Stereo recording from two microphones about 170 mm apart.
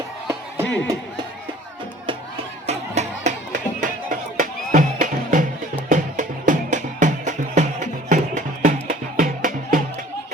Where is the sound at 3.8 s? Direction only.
50° right (ahead or behind).